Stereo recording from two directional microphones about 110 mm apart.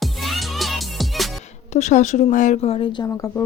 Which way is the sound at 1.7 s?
90° left.